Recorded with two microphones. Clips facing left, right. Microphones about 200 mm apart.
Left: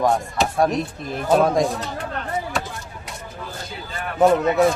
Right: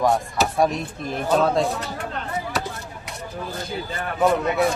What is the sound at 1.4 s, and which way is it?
Speech, 15° left (ahead or behind).